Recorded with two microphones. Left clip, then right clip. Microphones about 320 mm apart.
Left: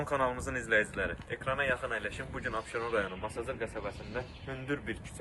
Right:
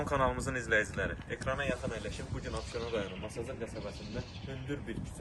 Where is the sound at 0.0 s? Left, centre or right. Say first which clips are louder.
Even; centre.